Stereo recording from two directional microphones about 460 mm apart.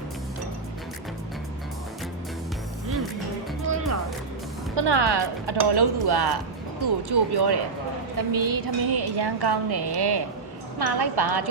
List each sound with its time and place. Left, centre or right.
4.7 s a woman's voice: right
8.3 s a woman's voice: right